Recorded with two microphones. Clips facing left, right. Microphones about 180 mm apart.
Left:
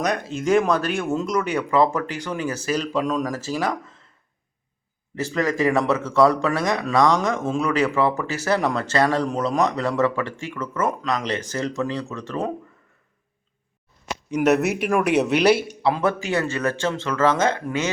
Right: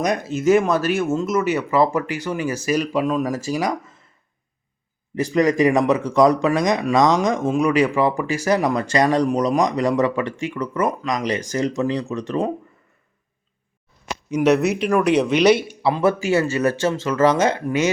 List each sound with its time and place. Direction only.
0.0 s speech: 10° right (ahead or behind)
5.1 s speech: 15° right (ahead or behind)
14.3 s speech: 5° left (ahead or behind); by 17.9 s 15° right (ahead or behind)